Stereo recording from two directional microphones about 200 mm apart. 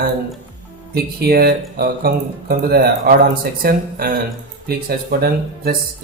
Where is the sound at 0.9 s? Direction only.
50° right (ahead or behind).